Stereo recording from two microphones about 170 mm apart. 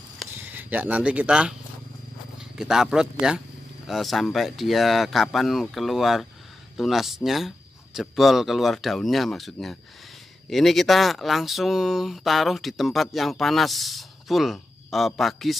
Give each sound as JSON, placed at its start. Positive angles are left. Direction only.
{"t": 0.3, "sound": "speech", "side_deg": -10}